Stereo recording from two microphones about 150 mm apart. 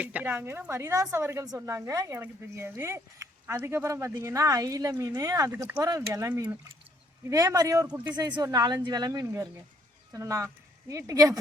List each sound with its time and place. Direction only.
0.0 s a woman's voice: 10° right (ahead or behind)
7.9 s a woman's voice: 10° right (ahead or behind)
8.1 s speech: 25° right (ahead or behind)